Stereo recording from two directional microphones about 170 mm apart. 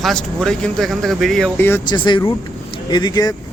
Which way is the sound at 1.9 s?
25° left (ahead or behind).